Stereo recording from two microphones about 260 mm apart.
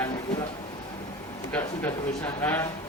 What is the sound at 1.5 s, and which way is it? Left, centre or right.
A man's voice, centre.